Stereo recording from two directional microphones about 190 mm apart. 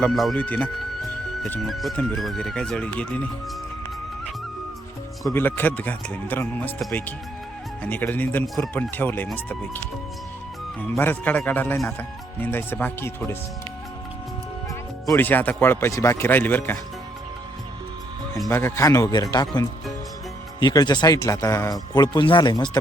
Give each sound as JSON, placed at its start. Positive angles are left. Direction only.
{"t": 0.0, "sound": "speech", "side_deg": 0}
{"t": 5.3, "sound": "speech", "side_deg": 10}
{"t": 15.1, "sound": "speech", "side_deg": 10}
{"t": 18.4, "sound": "speech", "side_deg": 15}